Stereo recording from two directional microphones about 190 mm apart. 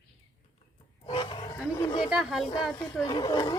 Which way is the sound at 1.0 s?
25° left (ahead or behind).